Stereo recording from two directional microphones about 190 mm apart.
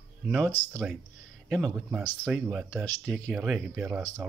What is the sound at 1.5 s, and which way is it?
Speech, centre (ahead or behind).